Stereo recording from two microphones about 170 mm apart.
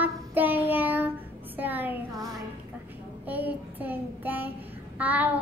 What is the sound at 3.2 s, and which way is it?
A woman's voice, 10° right (ahead or behind).